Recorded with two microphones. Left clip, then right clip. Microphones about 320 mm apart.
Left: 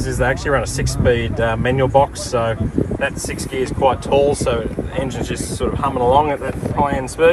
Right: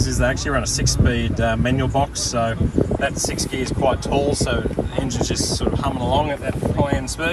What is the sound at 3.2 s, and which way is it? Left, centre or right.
Speech, centre.